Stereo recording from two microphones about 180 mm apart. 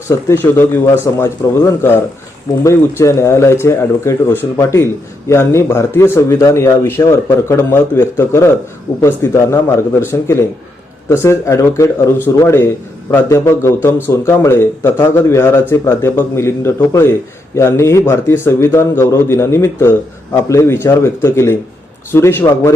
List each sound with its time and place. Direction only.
0.3 s a man's voice: 15° left (ahead or behind)